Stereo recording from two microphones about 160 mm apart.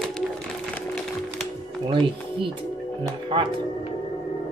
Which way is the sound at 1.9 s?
30° right (ahead or behind).